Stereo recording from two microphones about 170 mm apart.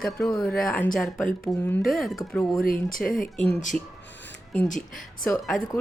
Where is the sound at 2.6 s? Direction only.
55° left (ahead or behind).